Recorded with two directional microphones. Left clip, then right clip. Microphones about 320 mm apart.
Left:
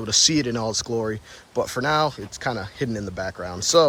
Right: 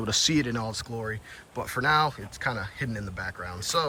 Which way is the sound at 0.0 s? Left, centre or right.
Centre.